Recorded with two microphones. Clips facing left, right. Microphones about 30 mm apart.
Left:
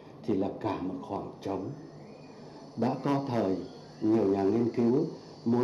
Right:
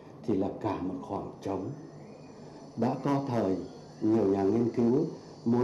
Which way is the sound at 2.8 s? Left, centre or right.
Left.